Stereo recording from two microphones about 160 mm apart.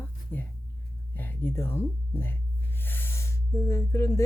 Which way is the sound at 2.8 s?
15° left (ahead or behind).